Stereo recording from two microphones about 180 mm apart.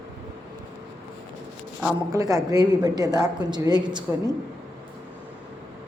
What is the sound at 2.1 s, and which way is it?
A woman's voice, 20° right (ahead or behind).